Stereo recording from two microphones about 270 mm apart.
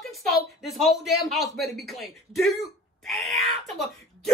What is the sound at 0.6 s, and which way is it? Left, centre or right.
A man's voice, centre.